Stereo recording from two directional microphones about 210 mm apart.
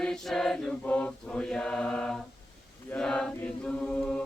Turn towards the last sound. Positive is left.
turn(degrees=5)  # may be behind; listen again after turning